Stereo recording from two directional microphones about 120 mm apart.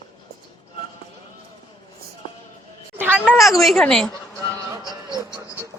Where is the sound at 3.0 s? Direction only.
15° right (ahead or behind); by 4.1 s 5° left (ahead or behind).